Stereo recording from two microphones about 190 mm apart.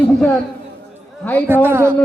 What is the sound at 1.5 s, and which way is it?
Speech, 10° right (ahead or behind).